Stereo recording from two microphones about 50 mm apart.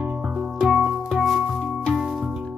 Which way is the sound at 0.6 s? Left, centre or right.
Centre.